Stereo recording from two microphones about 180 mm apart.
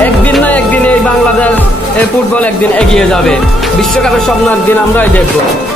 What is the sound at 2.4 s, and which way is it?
Speech, 5° left (ahead or behind).